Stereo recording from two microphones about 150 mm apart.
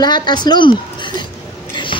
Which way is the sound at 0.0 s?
30° left (ahead or behind).